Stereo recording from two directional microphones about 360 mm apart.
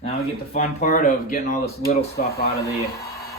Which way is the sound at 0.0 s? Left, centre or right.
Centre.